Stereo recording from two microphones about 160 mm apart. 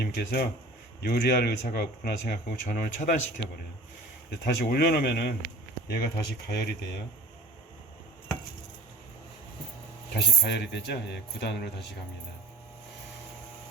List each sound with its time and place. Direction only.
0.0 s speech: 75° left (ahead or behind)
2.2 s speech: 55° left (ahead or behind)
4.3 s speech: 90° left
10.2 s speech: 90° left